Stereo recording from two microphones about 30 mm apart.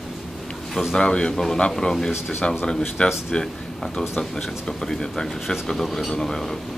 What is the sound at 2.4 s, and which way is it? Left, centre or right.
Speech, left.